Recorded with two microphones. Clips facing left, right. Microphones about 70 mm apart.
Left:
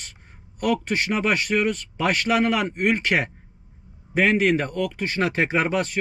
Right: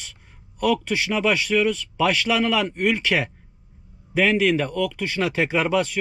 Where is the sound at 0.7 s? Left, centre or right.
Left.